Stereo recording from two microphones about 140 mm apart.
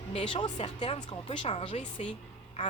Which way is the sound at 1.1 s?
40° left (ahead or behind).